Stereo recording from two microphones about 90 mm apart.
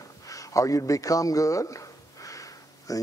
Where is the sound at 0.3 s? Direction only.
40° left (ahead or behind).